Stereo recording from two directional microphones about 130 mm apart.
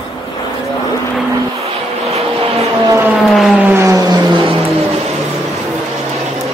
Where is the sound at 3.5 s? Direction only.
15° right (ahead or behind).